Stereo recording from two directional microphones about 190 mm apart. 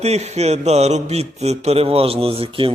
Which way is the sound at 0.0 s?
35° right (ahead or behind).